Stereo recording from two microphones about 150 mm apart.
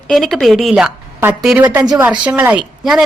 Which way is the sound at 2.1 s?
5° right (ahead or behind).